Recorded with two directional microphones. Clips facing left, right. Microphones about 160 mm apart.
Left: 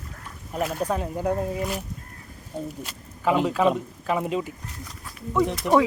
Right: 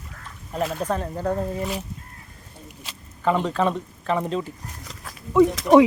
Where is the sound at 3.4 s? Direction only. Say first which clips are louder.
Left 2 dB; 10° left (ahead or behind).